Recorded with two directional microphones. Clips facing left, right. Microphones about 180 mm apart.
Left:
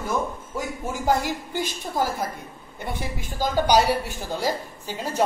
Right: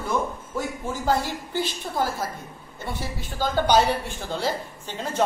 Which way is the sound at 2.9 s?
15° left (ahead or behind).